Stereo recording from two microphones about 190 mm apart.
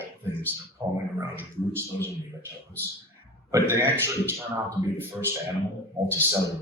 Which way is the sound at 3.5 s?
15° right (ahead or behind).